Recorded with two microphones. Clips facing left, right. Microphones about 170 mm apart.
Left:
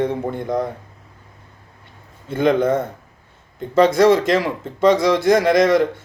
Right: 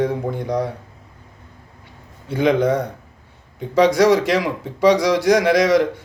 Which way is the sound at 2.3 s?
15° right (ahead or behind).